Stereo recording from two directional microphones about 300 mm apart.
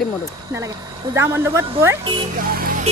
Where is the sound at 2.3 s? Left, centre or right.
Right.